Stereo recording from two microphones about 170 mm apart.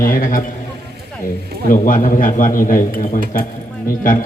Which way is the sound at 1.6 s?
55° left (ahead or behind).